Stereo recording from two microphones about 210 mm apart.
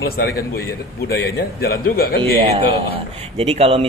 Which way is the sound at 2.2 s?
25° right (ahead or behind).